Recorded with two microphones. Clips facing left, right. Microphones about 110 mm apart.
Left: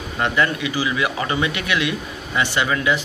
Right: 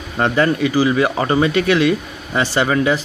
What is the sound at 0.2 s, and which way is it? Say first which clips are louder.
Speech: right 5 dB; 40° right (ahead or behind).